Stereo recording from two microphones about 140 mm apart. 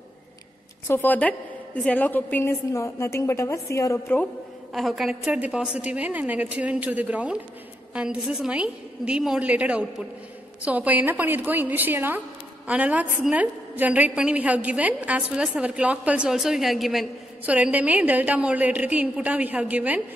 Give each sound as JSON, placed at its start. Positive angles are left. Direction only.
{"t": 0.8, "sound": "a woman's voice", "side_deg": 15}
{"t": 4.7, "sound": "a woman's voice", "side_deg": 0}